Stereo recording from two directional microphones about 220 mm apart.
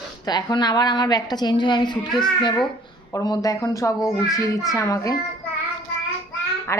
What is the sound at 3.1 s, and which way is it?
A woman's voice, 15° left (ahead or behind).